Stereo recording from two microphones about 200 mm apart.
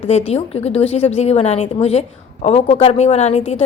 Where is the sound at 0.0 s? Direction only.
35° left (ahead or behind).